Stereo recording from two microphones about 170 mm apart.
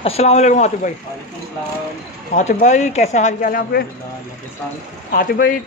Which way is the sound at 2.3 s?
45° left (ahead or behind).